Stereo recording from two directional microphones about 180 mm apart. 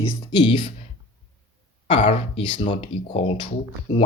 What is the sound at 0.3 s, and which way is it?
Speech, 30° left (ahead or behind).